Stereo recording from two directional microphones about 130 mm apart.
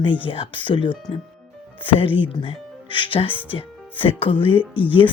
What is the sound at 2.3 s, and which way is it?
Speech, 45° left (ahead or behind).